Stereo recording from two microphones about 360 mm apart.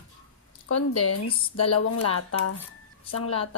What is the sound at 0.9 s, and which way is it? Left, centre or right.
Dishes, left.